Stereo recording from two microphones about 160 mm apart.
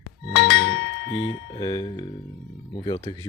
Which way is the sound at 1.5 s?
25° left (ahead or behind).